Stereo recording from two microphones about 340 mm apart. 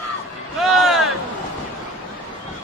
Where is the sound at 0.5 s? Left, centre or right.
Centre.